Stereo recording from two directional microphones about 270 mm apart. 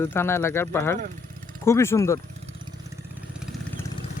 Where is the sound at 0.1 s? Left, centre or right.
Centre.